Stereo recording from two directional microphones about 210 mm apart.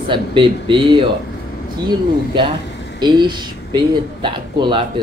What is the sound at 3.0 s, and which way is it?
Speech, 20° right (ahead or behind).